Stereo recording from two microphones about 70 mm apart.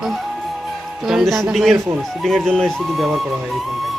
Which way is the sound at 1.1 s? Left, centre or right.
Centre.